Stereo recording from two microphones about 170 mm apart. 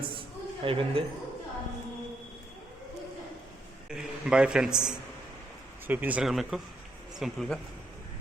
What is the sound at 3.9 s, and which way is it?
A man's voice, 5° right (ahead or behind).